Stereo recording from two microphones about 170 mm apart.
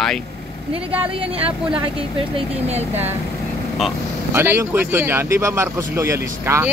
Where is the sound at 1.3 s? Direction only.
35° right (ahead or behind).